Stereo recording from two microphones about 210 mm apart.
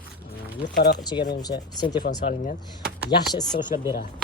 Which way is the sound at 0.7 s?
45° left (ahead or behind).